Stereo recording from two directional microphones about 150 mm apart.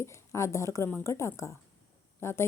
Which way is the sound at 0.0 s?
20° left (ahead or behind).